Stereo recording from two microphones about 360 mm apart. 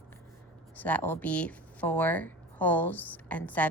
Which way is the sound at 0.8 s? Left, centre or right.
Centre.